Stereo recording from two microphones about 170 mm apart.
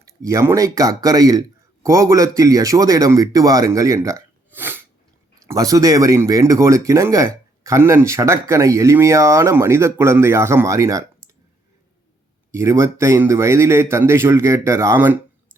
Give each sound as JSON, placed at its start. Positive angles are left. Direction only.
{"t": 0.0, "sound": "speech", "side_deg": -20}
{"t": 12.5, "sound": "speech", "side_deg": -15}